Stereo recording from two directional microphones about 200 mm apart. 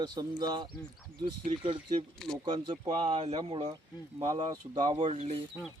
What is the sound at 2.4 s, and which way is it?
Speech, 20° right (ahead or behind).